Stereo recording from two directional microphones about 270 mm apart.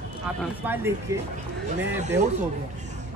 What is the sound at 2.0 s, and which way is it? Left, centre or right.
Speech, right.